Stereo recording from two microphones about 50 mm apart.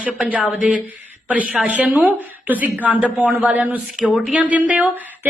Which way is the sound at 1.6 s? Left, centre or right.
Right.